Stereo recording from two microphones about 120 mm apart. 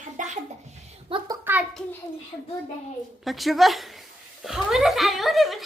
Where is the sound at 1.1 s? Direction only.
45° right (ahead or behind).